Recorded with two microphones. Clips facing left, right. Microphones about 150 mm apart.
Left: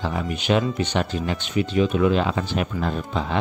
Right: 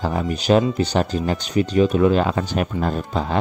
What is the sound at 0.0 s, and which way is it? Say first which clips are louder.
Speech: right 4 dB; 40° right (ahead or behind).